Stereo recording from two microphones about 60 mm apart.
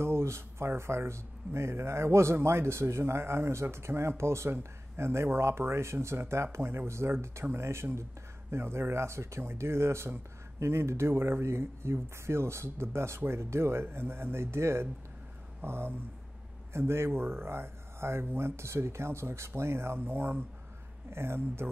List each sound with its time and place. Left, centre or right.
0.0 s speech: right